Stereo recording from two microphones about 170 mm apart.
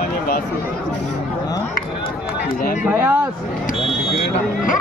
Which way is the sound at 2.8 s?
15° right (ahead or behind).